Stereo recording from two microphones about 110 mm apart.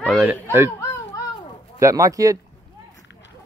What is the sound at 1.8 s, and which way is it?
Speech, 30° right (ahead or behind).